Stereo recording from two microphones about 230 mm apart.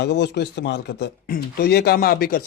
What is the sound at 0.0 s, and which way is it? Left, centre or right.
Speech, left.